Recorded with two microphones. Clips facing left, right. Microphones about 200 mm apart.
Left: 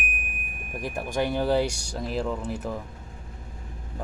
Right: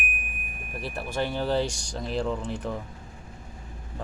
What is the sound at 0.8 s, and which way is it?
Speech, 15° left (ahead or behind).